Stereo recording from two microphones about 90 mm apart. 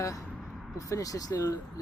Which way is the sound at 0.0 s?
40° left (ahead or behind).